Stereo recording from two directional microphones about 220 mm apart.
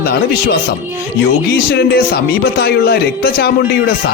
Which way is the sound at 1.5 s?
45° left (ahead or behind).